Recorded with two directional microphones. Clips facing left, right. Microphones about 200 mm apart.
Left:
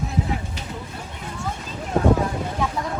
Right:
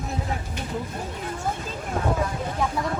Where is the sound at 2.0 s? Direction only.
35° left (ahead or behind).